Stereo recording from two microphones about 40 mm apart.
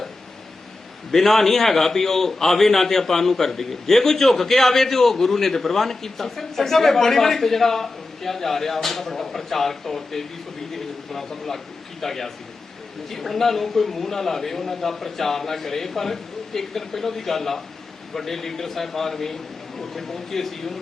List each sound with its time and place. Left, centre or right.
1.1 s a man's voice: centre